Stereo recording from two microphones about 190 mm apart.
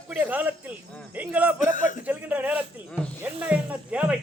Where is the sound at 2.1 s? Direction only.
10° right (ahead or behind).